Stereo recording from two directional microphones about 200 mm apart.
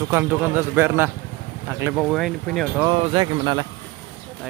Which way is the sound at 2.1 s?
Centre (ahead or behind).